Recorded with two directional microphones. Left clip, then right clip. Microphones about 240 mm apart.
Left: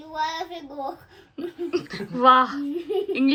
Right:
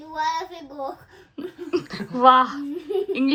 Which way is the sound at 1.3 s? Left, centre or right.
Centre.